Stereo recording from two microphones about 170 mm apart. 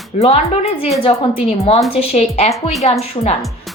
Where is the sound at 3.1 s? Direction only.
40° left (ahead or behind).